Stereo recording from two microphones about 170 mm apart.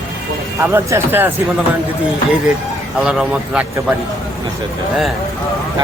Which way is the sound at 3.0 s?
5° right (ahead or behind).